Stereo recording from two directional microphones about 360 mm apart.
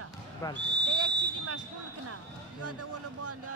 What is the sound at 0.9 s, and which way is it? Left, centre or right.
Speech, right.